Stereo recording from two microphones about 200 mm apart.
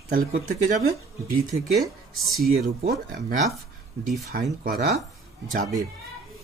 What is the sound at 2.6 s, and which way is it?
Speech, 40° right (ahead or behind).